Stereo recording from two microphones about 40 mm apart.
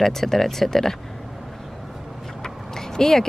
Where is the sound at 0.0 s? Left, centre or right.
Centre.